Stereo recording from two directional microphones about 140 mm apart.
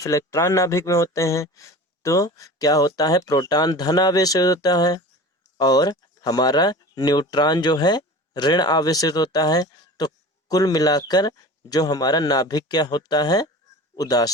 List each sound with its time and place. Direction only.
0.0 s speech: 20° left (ahead or behind)